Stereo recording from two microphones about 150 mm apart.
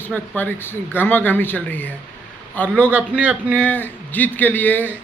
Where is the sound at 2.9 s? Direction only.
10° right (ahead or behind).